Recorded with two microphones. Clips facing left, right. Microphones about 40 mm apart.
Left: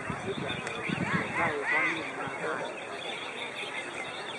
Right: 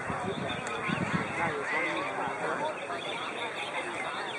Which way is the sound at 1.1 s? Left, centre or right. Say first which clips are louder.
Left 2 dB; centre.